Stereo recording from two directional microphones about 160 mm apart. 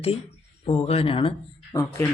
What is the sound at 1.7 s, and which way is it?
Speech, 20° left (ahead or behind).